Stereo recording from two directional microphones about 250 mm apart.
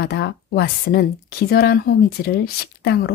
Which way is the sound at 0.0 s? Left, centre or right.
Left.